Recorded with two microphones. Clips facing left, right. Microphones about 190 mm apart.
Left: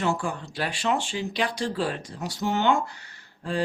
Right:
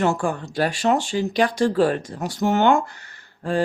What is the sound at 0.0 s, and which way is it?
Speech, 50° right (ahead or behind).